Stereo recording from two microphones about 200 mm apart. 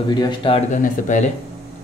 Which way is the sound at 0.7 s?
40° left (ahead or behind).